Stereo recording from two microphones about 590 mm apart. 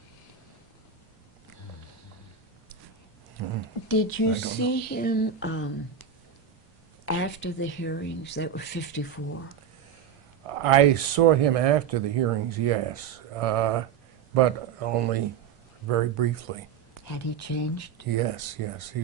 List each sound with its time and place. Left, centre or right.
3.8 s speech: centre
10.4 s speech: right
17.1 s speech: left
18.2 s speech: right